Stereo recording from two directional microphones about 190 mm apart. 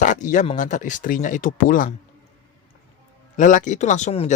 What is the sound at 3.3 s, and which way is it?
Speech, 40° left (ahead or behind).